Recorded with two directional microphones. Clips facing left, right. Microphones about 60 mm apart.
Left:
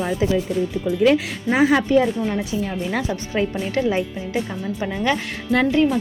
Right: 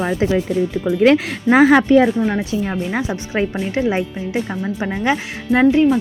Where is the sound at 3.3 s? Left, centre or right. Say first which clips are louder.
Right 2 dB; right.